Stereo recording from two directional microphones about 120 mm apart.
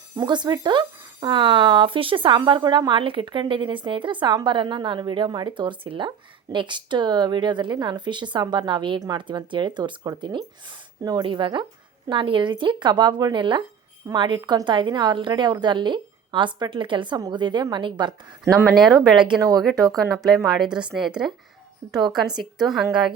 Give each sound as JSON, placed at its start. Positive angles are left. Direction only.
{"t": 0.2, "sound": "speech", "side_deg": -35}
{"t": 18.5, "sound": "speech", "side_deg": 0}
{"t": 18.9, "sound": "speech", "side_deg": -40}
{"t": 19.5, "sound": "speech", "side_deg": 0}